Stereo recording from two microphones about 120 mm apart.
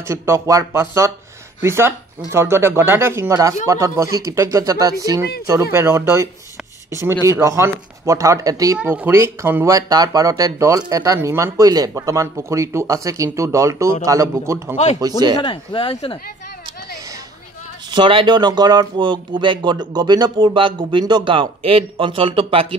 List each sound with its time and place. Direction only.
0.1 s speech: 25° right (ahead or behind)
8.8 s speech: 20° right (ahead or behind)
9.8 s speech: 30° right (ahead or behind)
15.4 s speech: 45° left (ahead or behind)
17.9 s speech: 40° right (ahead or behind)